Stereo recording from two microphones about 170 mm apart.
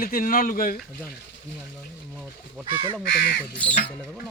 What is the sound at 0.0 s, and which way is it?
Speech, 55° left (ahead or behind).